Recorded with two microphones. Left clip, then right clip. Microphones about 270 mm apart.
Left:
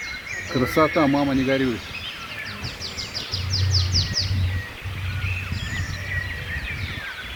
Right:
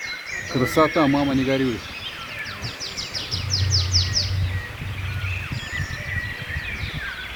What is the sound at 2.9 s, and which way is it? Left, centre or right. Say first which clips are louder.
Bird: right 1 dB; right.